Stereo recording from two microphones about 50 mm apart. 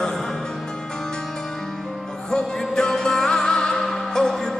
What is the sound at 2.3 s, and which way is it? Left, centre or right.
Music, centre.